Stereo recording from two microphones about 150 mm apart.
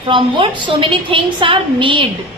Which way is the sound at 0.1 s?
35° right (ahead or behind).